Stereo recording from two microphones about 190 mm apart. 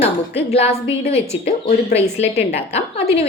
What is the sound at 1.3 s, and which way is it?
A woman's voice, 35° left (ahead or behind).